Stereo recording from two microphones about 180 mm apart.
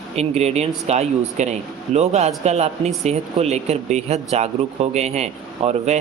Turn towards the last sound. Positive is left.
turn(degrees=-40)  # may be behind; listen again after turning